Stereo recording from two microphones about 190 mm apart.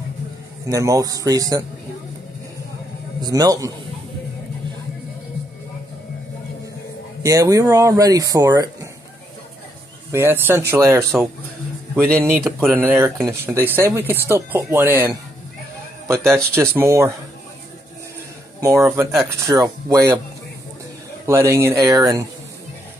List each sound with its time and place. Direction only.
0.7 s a man's voice: 15° right (ahead or behind)
3.2 s a man's voice: 20° right (ahead or behind)
7.2 s speech: 15° right (ahead or behind)
10.1 s speech: 10° right (ahead or behind)
12.4 s speech: centre (ahead or behind)
12.7 s speech: 10° right (ahead or behind)
18.6 s speech: 15° right (ahead or behind)
21.3 s speech: 15° right (ahead or behind)